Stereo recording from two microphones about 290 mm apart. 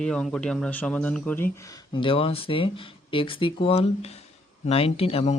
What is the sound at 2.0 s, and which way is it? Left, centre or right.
Speech, centre.